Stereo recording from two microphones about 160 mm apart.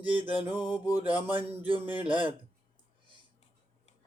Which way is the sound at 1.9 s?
30° right (ahead or behind).